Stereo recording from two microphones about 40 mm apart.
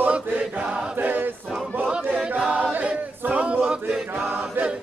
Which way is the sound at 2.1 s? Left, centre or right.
Centre.